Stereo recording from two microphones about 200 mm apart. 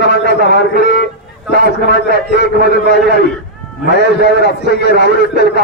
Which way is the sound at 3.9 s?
55° left (ahead or behind).